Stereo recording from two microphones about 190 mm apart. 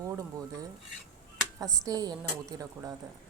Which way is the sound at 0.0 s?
15° right (ahead or behind).